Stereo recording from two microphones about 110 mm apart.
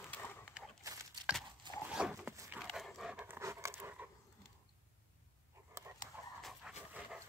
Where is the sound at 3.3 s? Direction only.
25° right (ahead or behind).